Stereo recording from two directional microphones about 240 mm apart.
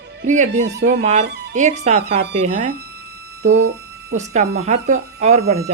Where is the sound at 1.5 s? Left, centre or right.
Right.